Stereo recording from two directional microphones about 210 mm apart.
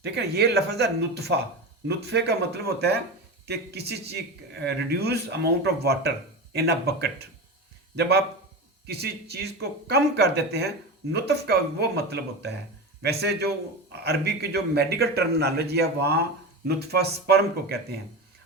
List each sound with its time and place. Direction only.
0.0 s a man's voice: 50° right (ahead or behind)
8.9 s a man's voice: 50° right (ahead or behind)